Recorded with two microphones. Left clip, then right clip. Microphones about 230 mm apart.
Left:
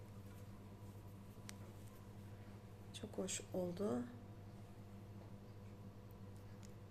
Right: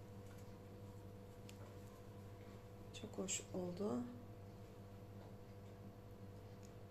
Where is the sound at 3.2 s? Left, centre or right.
Centre.